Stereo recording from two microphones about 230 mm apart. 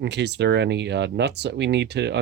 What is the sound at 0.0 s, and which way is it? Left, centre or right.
Speech, right.